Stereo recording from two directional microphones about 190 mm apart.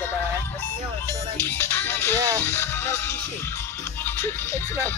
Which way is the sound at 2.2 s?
15° right (ahead or behind).